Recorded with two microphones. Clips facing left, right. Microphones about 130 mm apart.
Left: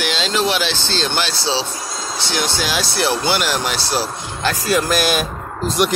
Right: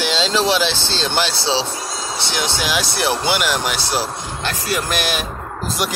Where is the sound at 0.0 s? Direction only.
25° right (ahead or behind).